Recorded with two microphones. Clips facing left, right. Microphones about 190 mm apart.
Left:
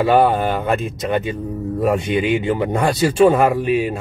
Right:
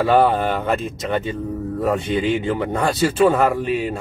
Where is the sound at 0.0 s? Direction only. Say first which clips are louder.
Left 1 dB; 10° left (ahead or behind).